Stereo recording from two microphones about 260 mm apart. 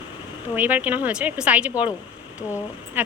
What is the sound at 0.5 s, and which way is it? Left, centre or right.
A woman's voice, centre.